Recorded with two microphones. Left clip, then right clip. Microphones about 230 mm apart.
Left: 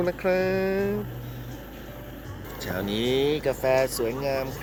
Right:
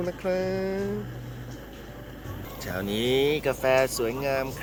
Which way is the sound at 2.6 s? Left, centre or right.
Centre.